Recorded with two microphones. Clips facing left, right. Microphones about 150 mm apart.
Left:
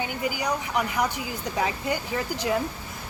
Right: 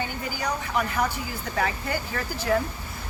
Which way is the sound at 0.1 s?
15° left (ahead or behind).